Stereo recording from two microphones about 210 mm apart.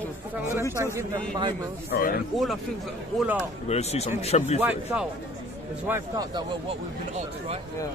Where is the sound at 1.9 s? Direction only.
45° left (ahead or behind).